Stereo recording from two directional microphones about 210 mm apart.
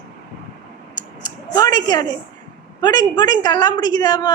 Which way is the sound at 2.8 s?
20° left (ahead or behind).